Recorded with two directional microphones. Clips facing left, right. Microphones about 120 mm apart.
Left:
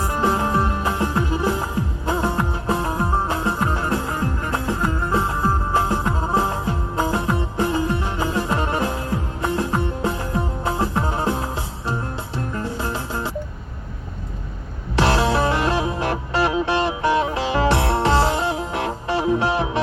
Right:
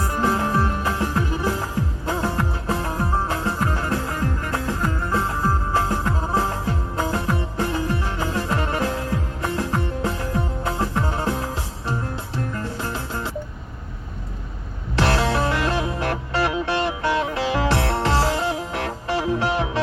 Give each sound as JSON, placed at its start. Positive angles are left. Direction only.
{"t": 0.0, "sound": "music", "side_deg": 20}
{"t": 14.9, "sound": "music", "side_deg": 20}